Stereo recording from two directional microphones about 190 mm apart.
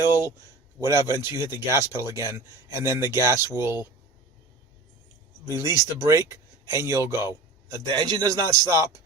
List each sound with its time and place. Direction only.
0.8 s speech: 15° right (ahead or behind)
5.5 s speech: 15° right (ahead or behind)